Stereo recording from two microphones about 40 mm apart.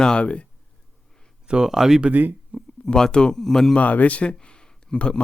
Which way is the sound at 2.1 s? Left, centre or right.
Right.